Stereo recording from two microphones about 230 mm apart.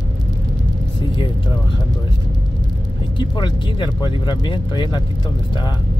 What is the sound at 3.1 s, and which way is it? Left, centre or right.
Speech, centre.